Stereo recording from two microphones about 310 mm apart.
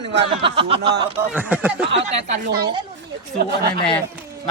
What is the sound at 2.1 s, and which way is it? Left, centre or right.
Speech, right.